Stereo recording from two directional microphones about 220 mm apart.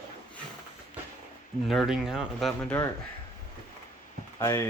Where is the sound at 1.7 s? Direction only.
Centre (ahead or behind).